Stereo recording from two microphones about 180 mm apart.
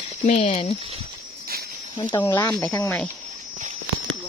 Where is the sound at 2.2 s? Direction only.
15° left (ahead or behind).